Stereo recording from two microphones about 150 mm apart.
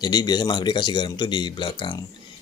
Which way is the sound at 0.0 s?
30° left (ahead or behind).